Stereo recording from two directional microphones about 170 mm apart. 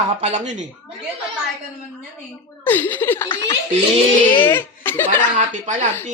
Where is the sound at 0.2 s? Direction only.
40° right (ahead or behind).